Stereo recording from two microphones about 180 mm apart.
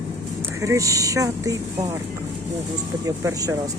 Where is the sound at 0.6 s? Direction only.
15° right (ahead or behind).